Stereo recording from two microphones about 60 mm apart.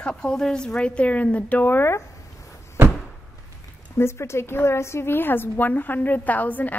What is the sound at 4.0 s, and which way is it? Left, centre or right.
A woman's voice, left.